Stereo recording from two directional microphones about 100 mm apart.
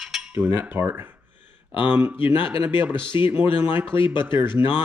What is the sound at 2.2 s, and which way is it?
Speech, 60° left (ahead or behind).